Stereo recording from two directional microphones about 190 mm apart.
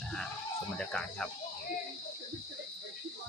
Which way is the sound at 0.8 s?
5° left (ahead or behind).